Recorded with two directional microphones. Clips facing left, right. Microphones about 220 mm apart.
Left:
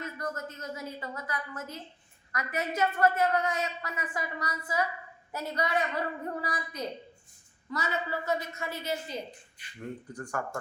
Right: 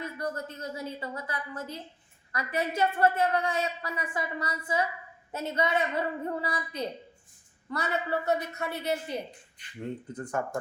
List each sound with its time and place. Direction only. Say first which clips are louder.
0.0 s a woman's voice: right 2 dB; 30° right (ahead or behind)
7.7 s a woman's voice: right 3 dB; 60° right (ahead or behind)
10.1 s a woman's voice: right 3 dB; 20° right (ahead or behind)